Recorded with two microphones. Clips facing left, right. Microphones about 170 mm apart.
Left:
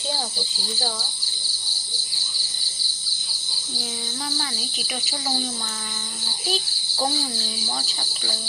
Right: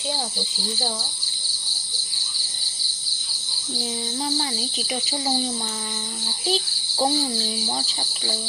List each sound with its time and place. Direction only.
4.4 s a child's voice: 30° right (ahead or behind)
6.5 s a child's voice: 25° right (ahead or behind)